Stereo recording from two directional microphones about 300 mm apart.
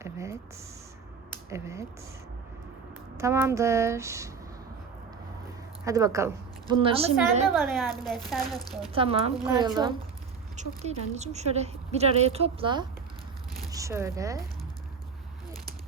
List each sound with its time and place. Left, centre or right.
0.0 s a sound: centre
1.5 s a woman's voice: centre
3.2 s a woman's voice: centre
5.8 s a woman's voice: centre
7.5 s speech: centre
8.9 s a woman's voice: centre